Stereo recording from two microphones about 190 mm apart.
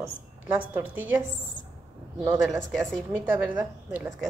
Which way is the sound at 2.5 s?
Centre (ahead or behind).